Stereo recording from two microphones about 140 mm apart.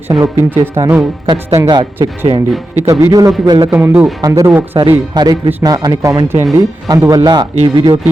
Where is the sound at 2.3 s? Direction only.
40° right (ahead or behind).